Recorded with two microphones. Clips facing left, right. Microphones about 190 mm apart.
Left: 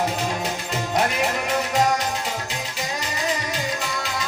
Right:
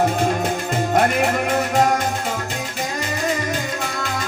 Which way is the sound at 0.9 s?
55° right (ahead or behind).